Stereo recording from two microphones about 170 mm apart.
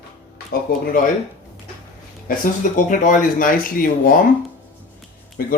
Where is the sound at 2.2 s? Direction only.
50° left (ahead or behind).